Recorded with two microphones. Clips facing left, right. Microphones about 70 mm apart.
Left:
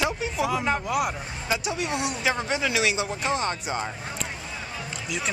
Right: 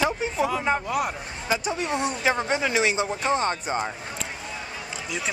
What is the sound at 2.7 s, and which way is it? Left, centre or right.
Speech, right.